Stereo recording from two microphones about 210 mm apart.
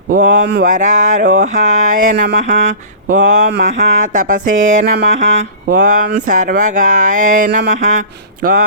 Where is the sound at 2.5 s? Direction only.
35° right (ahead or behind).